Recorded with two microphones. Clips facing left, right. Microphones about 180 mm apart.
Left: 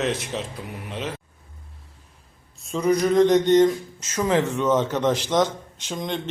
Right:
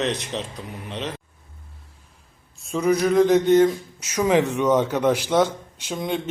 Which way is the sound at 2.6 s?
Centre (ahead or behind).